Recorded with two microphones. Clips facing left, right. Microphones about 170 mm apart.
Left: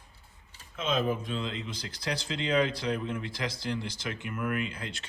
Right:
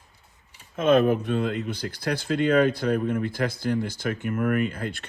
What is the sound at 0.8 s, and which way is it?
Speech, 60° right (ahead or behind).